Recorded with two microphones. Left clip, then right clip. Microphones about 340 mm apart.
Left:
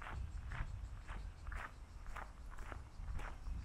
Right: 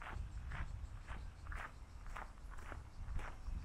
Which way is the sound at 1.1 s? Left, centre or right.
Centre.